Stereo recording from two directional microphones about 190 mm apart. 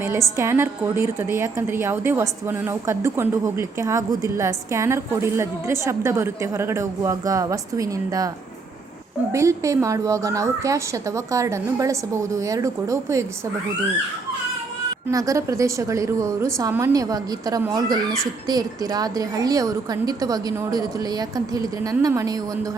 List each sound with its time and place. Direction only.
0.3 s a woman's voice: 15° right (ahead or behind)
9.3 s a woman's voice: 15° right (ahead or behind)
15.1 s a woman's voice: 15° right (ahead or behind)